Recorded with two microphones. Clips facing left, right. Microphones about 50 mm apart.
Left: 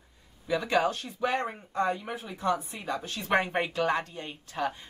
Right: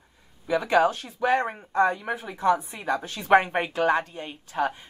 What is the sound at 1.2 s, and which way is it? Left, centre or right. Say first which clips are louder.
Speech: right 6 dB; right.